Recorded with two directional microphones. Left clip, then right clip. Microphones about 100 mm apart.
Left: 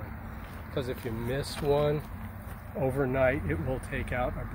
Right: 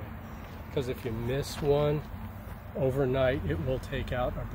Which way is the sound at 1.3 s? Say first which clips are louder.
Even; 65° right (ahead or behind).